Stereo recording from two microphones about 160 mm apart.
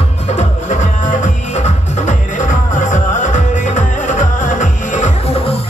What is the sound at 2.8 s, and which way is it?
Music, 50° left (ahead or behind).